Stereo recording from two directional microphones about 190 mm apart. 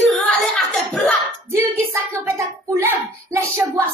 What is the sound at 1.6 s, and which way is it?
Speech, 15° right (ahead or behind).